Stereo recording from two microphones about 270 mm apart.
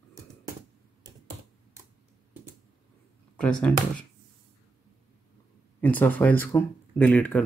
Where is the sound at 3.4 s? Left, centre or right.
Centre.